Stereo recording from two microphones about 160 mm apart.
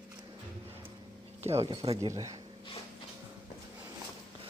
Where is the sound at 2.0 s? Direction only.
20° right (ahead or behind).